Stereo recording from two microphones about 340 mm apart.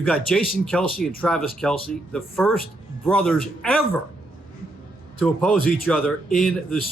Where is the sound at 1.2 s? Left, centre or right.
Centre.